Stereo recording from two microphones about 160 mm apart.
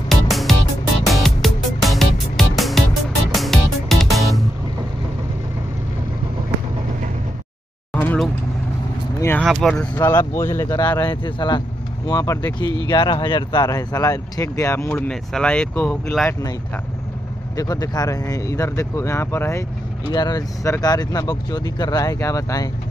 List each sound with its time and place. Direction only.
0.1 s music: centre (ahead or behind)
7.9 s vehicle: 10° left (ahead or behind)
9.4 s speech: centre (ahead or behind)
9.9 s speech: 15° left (ahead or behind); by 16.3 s centre (ahead or behind)
17.6 s speech: 25° left (ahead or behind)